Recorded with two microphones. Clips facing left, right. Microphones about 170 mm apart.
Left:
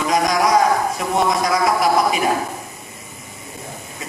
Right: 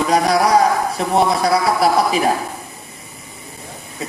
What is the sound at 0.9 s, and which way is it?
A man's voice, 35° right (ahead or behind).